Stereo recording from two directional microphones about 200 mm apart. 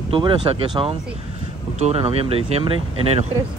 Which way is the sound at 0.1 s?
25° right (ahead or behind).